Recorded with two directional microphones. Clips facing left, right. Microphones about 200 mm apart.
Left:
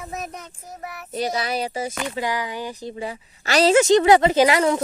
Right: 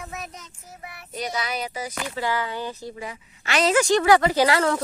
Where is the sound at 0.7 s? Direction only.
45° left (ahead or behind).